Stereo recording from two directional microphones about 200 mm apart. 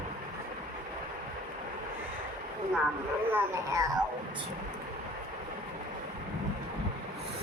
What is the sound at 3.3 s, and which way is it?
Babbling, 10° right (ahead or behind).